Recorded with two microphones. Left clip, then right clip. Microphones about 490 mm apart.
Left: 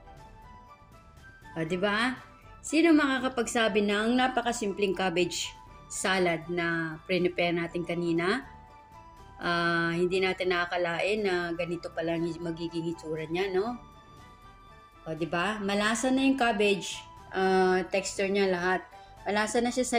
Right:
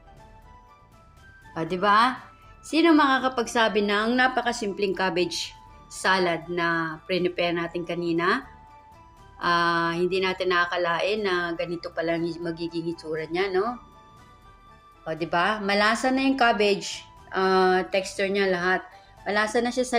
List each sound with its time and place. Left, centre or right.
1.5 s a woman's voice: left
9.4 s a woman's voice: left
15.0 s a woman's voice: left